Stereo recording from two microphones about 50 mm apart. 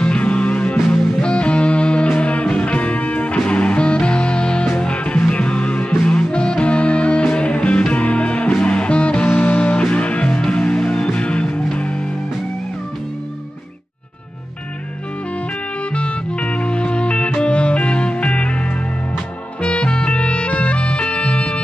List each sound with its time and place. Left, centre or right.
0.0 s music: left
0.7 s music: centre
1.2 s music: left
15.9 s music: left